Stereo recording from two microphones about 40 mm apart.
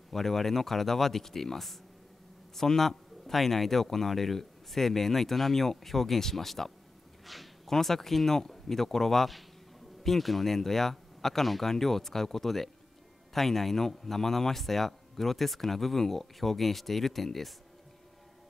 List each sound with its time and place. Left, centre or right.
0.1 s a man's voice: centre